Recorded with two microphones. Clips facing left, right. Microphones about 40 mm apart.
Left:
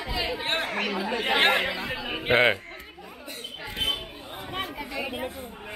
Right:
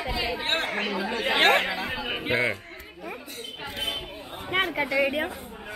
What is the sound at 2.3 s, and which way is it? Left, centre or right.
Speech, left.